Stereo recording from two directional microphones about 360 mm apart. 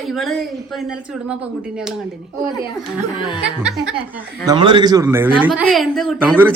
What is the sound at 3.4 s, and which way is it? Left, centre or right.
A man's voice, centre.